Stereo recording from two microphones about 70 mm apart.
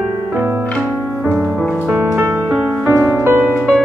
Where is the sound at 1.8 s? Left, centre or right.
Right.